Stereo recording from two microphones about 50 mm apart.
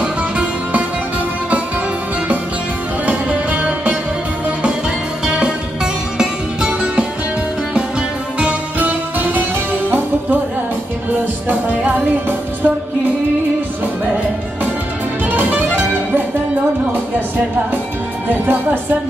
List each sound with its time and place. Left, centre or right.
0.0 s music: right
3.1 s music: right
5.2 s music: centre
8.4 s music: right
11.4 s music: right
15.3 s music: right
18.3 s speech: right